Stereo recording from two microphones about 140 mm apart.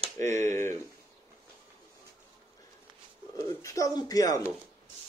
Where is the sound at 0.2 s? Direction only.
55° right (ahead or behind).